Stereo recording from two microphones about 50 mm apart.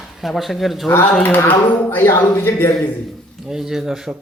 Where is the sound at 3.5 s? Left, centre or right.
Centre.